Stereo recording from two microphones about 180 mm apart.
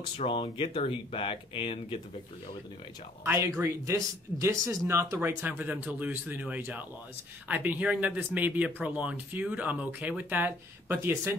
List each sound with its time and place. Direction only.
0.3 s speech: 30° left (ahead or behind)
3.3 s speech: 15° right (ahead or behind)